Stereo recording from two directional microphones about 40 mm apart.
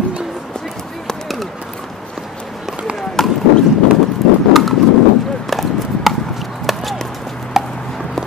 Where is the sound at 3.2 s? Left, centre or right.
Centre.